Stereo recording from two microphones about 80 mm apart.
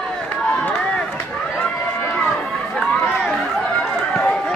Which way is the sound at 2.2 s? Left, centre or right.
Centre.